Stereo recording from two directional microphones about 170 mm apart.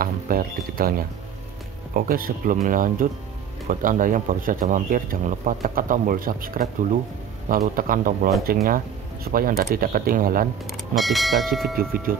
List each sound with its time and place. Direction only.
0.0 s speech: 60° right (ahead or behind)
10.7 s speech: centre (ahead or behind)